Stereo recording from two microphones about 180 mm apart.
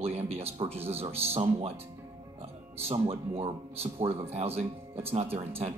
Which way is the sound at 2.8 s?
30° right (ahead or behind).